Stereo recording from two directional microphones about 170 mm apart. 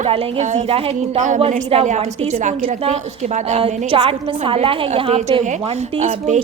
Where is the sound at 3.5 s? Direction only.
35° right (ahead or behind).